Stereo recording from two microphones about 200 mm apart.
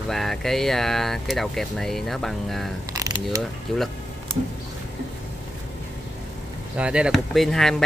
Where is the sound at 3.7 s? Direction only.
5° left (ahead or behind).